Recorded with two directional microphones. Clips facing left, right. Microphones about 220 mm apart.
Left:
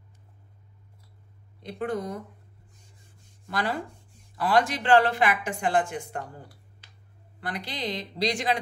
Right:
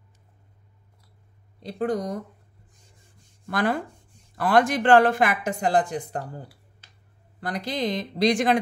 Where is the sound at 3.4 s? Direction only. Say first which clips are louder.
Right 5 dB; 50° right (ahead or behind); by 6.2 s 35° right (ahead or behind).